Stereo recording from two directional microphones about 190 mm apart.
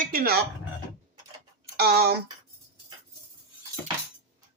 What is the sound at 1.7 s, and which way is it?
Speech, 55° right (ahead or behind).